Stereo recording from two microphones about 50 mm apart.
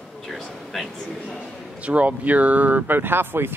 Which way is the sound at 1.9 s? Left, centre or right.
Right.